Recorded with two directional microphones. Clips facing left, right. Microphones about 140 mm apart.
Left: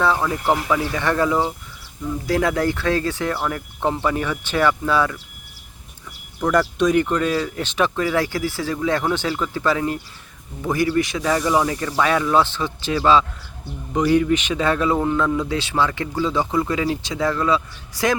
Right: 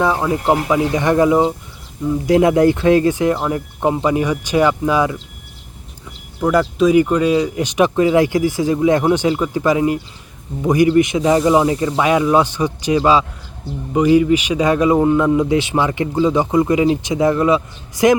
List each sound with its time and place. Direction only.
0.0 s a man's voice: 15° right (ahead or behind)
6.4 s a man's voice: 5° right (ahead or behind)